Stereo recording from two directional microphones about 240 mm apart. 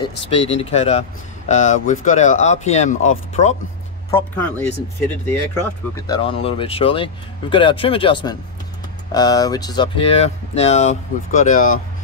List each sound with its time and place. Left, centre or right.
0.3 s speech: left
4.1 s speech: centre; by 11.7 s left